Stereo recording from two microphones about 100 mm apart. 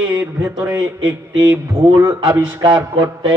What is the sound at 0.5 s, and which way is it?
A man's voice, 40° right (ahead or behind).